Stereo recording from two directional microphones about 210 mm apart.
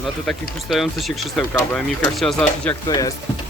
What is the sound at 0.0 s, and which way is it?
Speech, centre (ahead or behind).